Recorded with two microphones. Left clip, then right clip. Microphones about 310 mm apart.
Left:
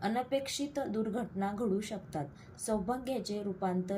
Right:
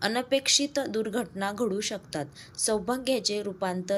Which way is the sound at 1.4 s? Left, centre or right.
Right.